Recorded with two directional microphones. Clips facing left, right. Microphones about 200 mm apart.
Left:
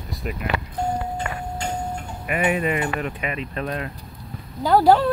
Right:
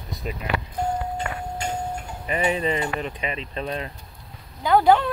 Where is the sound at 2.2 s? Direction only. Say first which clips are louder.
Left 1 dB; 25° right (ahead or behind).